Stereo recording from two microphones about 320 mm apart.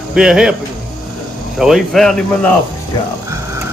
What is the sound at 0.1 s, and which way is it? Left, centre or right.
Speech, centre.